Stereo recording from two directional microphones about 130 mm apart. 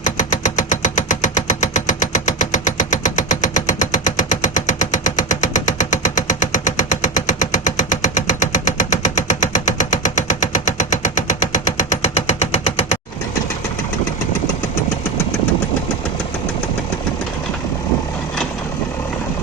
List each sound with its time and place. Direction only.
0.0 s engine: 70° left (ahead or behind)